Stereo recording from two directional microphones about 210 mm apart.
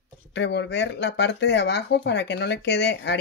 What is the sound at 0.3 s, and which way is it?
Speech, 55° left (ahead or behind).